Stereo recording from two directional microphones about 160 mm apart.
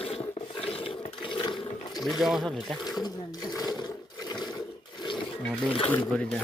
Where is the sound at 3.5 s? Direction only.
25° left (ahead or behind).